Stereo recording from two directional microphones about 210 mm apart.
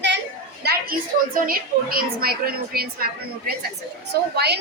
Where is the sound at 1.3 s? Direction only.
45° right (ahead or behind).